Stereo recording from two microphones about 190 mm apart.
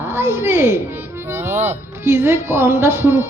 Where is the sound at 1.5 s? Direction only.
35° right (ahead or behind).